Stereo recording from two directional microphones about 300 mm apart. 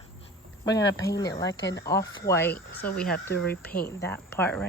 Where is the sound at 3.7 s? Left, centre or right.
Left.